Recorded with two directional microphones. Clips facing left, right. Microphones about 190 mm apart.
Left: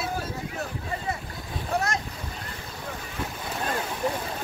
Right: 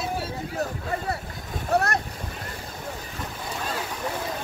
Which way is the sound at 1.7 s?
60° right (ahead or behind).